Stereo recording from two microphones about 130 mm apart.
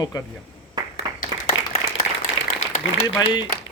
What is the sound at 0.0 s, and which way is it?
Speech, 30° left (ahead or behind).